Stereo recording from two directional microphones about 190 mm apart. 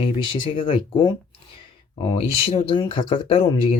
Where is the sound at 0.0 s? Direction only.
30° left (ahead or behind).